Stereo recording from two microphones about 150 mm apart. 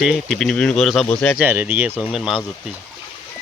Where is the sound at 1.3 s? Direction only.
15° right (ahead or behind).